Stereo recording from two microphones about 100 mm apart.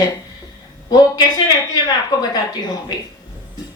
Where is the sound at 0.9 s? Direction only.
40° left (ahead or behind).